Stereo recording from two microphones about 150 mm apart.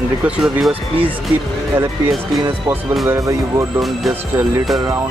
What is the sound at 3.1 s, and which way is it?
Speech, 20° right (ahead or behind).